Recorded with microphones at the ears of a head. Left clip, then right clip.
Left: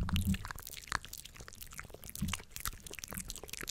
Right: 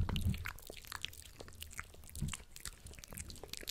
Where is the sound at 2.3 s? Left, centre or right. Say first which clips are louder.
Left 8 dB; left.